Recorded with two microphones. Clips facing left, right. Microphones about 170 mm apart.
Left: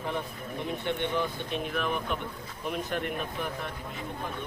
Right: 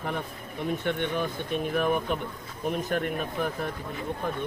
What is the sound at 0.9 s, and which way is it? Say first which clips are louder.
Speech: left 1 dB; 50° right (ahead or behind).